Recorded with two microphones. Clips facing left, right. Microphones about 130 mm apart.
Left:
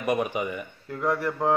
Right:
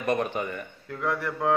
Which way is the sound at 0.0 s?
10° left (ahead or behind).